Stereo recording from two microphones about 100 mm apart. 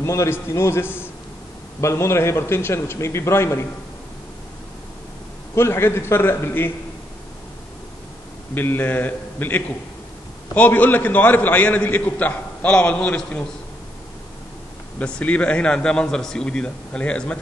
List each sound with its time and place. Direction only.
0.0 s a man's voice: 30° left (ahead or behind)
5.5 s a man's voice: 25° left (ahead or behind)
8.5 s a man's voice: 20° left (ahead or behind)
15.0 s a man's voice: 10° left (ahead or behind)